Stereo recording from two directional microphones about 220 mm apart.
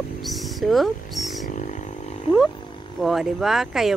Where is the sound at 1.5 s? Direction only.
35° left (ahead or behind).